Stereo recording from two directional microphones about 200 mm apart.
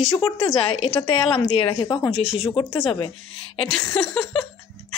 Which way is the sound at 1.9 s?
10° left (ahead or behind).